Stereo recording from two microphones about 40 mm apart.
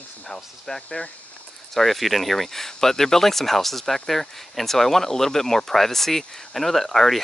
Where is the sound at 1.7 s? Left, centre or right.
Centre.